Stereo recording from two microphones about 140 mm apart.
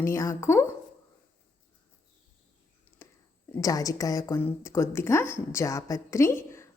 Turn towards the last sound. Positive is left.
turn(degrees=20)  # may be behind; listen again after turning